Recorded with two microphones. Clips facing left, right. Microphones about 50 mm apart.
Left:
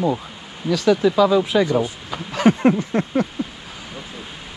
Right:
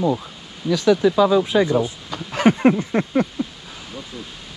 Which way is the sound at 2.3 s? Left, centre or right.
Right.